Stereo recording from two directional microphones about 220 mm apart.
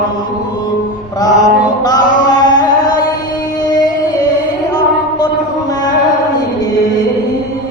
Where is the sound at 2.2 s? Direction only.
15° left (ahead or behind).